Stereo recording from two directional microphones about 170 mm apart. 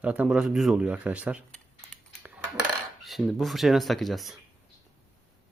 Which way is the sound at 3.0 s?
Centre (ahead or behind).